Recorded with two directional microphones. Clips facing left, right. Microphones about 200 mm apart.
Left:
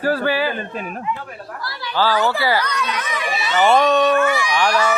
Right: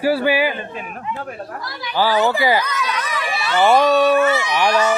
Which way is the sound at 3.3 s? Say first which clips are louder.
Right 1 dB; 20° left (ahead or behind).